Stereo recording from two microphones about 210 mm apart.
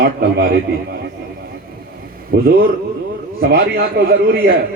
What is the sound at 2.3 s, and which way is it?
A man's voice, 50° right (ahead or behind).